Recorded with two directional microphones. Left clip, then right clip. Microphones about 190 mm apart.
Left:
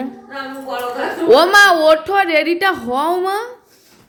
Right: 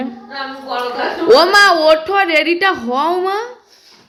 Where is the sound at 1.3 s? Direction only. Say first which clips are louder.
Even; 20° left (ahead or behind).